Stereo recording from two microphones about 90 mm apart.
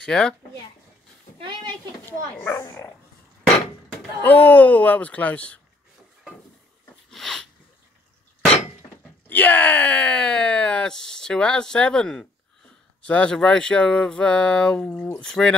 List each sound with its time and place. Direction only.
0.0 s speech: 10° left (ahead or behind)
2.0 s a child's voice: 25° left (ahead or behind)
4.2 s speech: 20° left (ahead or behind)
7.1 s sneeze: 5° left (ahead or behind)
9.3 s speech: 20° left (ahead or behind)